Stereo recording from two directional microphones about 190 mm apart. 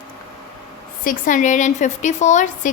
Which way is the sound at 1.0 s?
45° left (ahead or behind).